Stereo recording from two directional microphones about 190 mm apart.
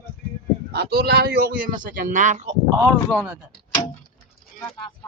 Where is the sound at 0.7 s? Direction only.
55° right (ahead or behind); by 2.6 s 40° right (ahead or behind).